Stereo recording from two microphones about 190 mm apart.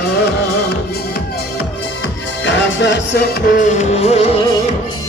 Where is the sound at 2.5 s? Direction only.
70° left (ahead or behind); by 4.2 s 35° left (ahead or behind).